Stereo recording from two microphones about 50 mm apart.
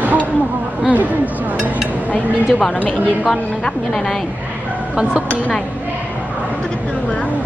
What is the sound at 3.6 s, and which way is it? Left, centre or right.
Speech, centre.